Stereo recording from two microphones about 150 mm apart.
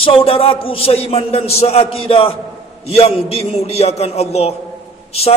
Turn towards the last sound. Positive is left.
turn(degrees=45)  # may be behind; listen again after turning